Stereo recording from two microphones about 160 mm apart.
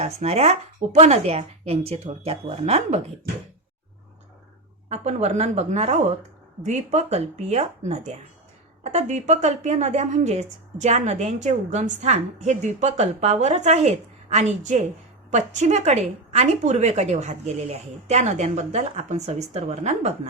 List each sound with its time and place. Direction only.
0.0 s speech: 40° right (ahead or behind)
4.9 s a woman's voice: 40° right (ahead or behind)